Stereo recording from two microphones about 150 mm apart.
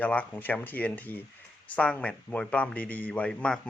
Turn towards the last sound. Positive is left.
turn(degrees=5)  # may be behind; listen again after turning